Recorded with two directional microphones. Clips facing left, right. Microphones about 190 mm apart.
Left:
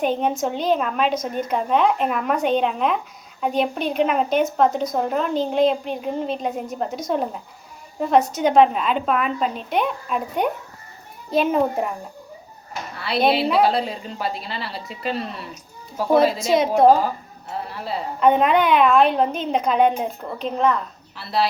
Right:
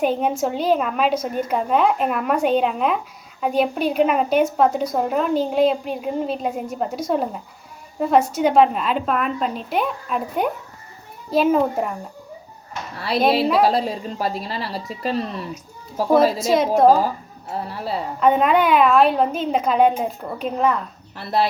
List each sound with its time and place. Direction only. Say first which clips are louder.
0.0 s a woman's voice: right 1 dB; 5° right (ahead or behind)
13.0 s a woman's voice: right 1 dB; 40° right (ahead or behind)
16.6 s a woman's voice: even; centre (ahead or behind)
17.5 s a woman's voice: right 2 dB; 40° right (ahead or behind)
18.2 s a woman's voice: even; centre (ahead or behind)
21.2 s speech: right 2 dB; 50° right (ahead or behind)